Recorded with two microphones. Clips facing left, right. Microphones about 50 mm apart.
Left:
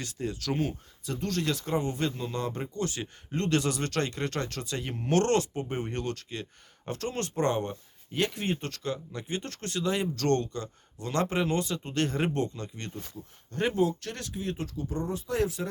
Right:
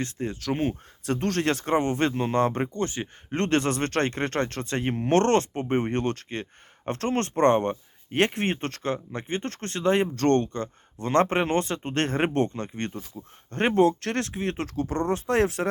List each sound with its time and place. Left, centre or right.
0.0 s speech: right
1.0 s speech: right
2.8 s speech: right
3.3 s speech: right